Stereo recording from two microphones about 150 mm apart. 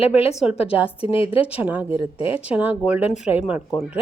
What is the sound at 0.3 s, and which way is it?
Speech, 5° right (ahead or behind).